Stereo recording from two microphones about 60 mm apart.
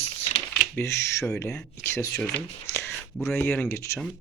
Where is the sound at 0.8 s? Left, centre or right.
Left.